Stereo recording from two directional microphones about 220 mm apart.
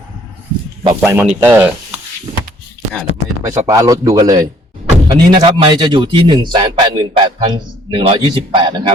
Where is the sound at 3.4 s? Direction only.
15° right (ahead or behind).